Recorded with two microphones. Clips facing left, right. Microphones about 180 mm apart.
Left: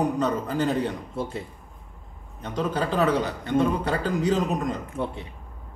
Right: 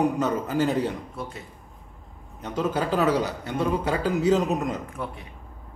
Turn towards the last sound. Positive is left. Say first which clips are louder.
# left 4 dB
turn(degrees=25)  # may be behind; listen again after turning